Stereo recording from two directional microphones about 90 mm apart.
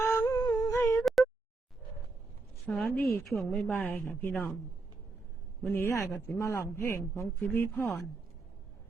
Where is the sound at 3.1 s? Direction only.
25° left (ahead or behind).